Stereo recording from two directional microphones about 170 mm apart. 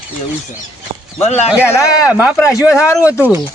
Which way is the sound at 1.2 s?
40° left (ahead or behind).